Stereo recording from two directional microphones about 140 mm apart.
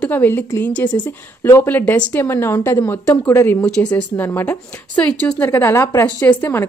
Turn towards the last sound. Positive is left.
turn(degrees=15)  # may be behind; listen again after turning